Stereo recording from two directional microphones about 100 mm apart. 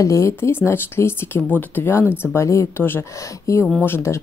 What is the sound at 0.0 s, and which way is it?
Speech, 30° left (ahead or behind).